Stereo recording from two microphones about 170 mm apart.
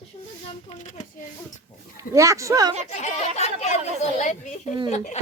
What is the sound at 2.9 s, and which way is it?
Speech, 40° left (ahead or behind).